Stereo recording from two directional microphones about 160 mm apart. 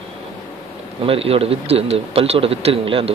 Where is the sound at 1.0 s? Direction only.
35° right (ahead or behind).